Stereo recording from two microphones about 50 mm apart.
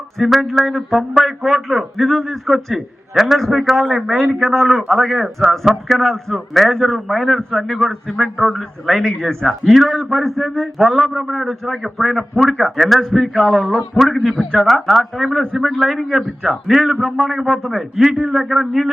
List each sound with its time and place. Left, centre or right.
0.2 s a man's voice: centre
18.1 s a man's voice: centre
18.3 s a man's voice: centre